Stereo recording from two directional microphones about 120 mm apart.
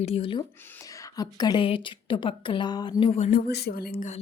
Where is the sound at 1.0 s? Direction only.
35° left (ahead or behind).